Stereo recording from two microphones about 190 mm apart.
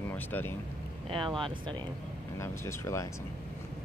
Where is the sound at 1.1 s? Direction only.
25° right (ahead or behind).